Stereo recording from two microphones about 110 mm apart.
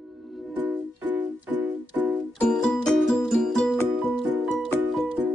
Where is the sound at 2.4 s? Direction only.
5° left (ahead or behind).